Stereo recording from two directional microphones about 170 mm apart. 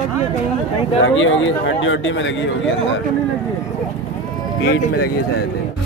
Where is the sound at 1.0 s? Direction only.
90° left.